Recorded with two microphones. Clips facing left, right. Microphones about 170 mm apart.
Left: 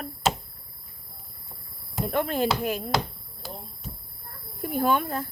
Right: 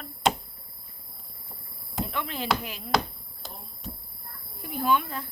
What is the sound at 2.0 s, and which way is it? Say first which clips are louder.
Speech: left 6 dB; 45° left (ahead or behind).